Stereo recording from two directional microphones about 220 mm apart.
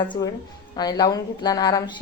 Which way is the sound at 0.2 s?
15° left (ahead or behind).